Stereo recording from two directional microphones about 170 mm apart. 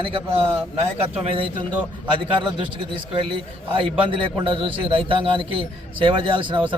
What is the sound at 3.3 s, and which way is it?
A man's voice, 30° right (ahead or behind).